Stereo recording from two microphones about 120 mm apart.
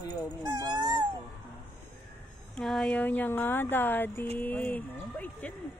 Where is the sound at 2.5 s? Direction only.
5° left (ahead or behind).